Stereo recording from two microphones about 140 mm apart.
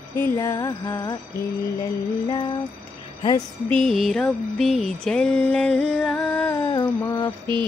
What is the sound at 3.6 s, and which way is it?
Mantra, 5° left (ahead or behind).